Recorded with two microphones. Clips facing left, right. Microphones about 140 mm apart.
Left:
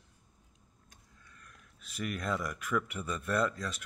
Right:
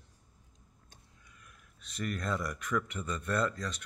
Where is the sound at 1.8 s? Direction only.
5° left (ahead or behind).